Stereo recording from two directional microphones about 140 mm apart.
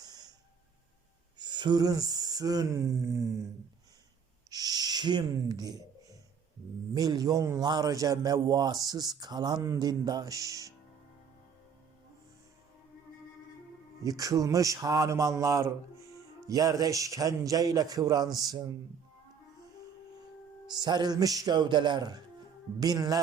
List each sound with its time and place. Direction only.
0.0 s snort: 30° right (ahead or behind)
1.4 s speech: 30° right (ahead or behind)
4.4 s owl: 25° right (ahead or behind)
6.9 s speech: 25° right (ahead or behind)
14.0 s speech: 25° right (ahead or behind)
20.7 s speech: 30° right (ahead or behind)